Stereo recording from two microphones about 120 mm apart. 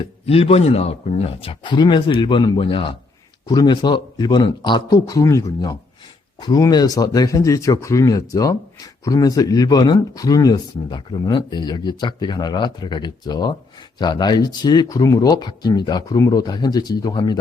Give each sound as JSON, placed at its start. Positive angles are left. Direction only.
{"t": 0.0, "sound": "speech", "side_deg": 55}
{"t": 3.4, "sound": "speech", "side_deg": 35}